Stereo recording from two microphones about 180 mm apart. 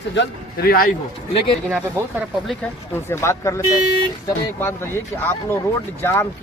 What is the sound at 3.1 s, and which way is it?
Speech, 15° left (ahead or behind).